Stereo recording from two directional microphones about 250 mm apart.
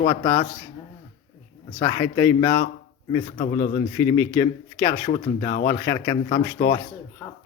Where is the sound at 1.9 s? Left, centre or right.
Centre.